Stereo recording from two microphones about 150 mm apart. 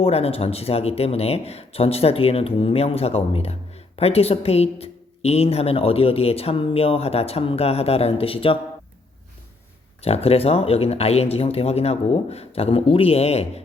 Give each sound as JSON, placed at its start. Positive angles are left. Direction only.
{"t": 0.0, "sound": "speech", "side_deg": 40}
{"t": 10.0, "sound": "speech", "side_deg": 40}